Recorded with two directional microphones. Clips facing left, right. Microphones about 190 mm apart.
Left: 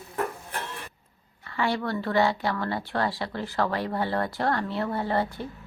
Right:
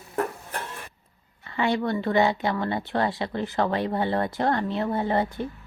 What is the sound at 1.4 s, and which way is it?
Speech, 20° right (ahead or behind).